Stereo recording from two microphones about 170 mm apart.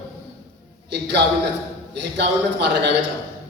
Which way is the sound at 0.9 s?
85° right.